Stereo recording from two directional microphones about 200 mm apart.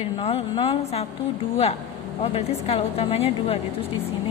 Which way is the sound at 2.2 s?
30° left (ahead or behind).